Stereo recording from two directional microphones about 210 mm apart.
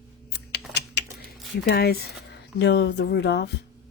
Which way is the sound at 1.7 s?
50° left (ahead or behind).